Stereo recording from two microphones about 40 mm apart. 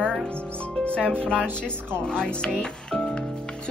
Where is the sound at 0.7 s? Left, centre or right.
Left.